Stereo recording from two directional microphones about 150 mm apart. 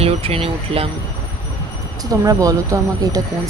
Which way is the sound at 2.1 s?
25° right (ahead or behind).